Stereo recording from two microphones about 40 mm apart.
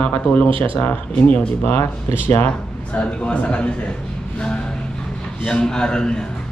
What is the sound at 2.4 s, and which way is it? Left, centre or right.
Speech, left.